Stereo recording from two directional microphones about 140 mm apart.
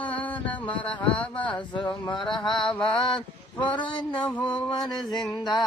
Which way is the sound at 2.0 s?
35° left (ahead or behind).